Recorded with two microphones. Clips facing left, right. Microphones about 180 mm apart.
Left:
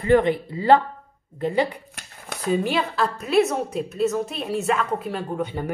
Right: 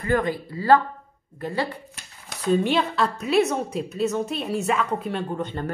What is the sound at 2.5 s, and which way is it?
A woman's voice, centre (ahead or behind).